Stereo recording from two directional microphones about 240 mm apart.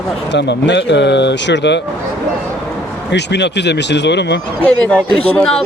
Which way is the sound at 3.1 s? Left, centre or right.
Left.